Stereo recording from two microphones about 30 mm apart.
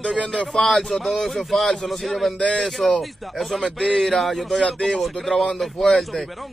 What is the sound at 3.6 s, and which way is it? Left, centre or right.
Speech, left.